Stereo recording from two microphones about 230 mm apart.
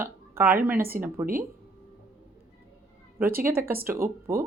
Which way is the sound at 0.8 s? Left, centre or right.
Right.